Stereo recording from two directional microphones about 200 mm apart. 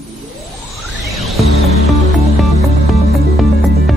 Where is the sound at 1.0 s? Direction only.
Centre (ahead or behind).